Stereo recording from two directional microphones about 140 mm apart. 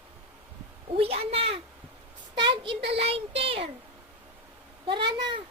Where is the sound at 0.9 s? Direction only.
45° right (ahead or behind).